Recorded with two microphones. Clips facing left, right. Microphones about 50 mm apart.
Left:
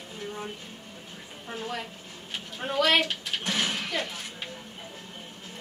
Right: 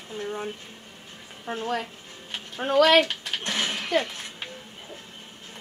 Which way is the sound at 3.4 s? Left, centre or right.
Centre.